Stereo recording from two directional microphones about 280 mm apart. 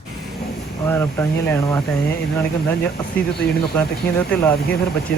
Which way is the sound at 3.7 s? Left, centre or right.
Centre.